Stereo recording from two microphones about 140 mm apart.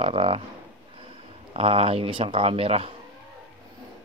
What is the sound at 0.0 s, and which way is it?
Speech, 40° right (ahead or behind).